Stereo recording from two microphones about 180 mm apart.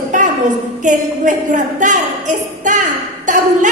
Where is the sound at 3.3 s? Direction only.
45° right (ahead or behind).